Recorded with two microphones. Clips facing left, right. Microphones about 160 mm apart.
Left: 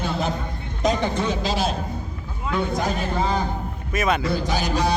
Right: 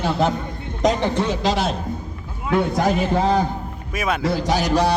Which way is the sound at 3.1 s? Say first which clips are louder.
Right 5 dB; 70° right (ahead or behind).